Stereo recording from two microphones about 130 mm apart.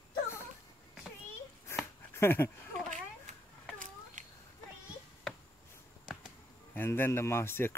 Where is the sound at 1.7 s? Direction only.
20° left (ahead or behind).